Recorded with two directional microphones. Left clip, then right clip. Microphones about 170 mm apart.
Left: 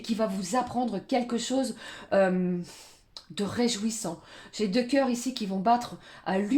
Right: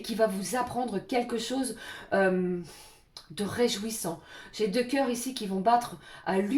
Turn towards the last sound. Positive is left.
turn(degrees=40)  # may be behind; listen again after turning